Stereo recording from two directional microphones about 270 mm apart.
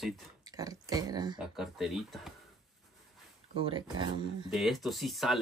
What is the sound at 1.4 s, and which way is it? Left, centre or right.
Speech, centre.